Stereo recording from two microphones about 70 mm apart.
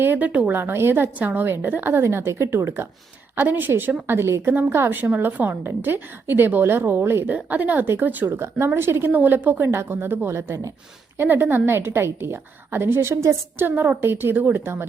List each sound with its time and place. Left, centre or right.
0.0 s a woman's voice: right
3.3 s a woman's voice: right
7.3 s a woman's voice: right
11.2 s a woman's voice: right